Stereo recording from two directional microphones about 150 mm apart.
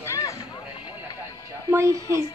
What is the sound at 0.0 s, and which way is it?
Vehicle, 20° left (ahead or behind).